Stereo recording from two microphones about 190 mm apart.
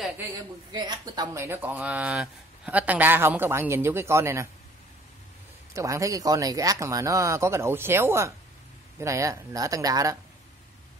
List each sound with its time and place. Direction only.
0.2 s speech: 20° right (ahead or behind)
5.7 s speech: 15° right (ahead or behind)